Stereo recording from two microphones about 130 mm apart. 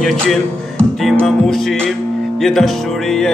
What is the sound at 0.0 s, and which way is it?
Music, centre (ahead or behind).